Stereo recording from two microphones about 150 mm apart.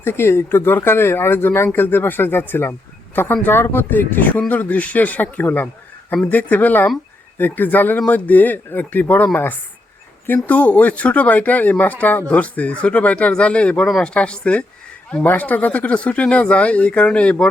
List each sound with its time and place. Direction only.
0.0 s speech: 15° left (ahead or behind)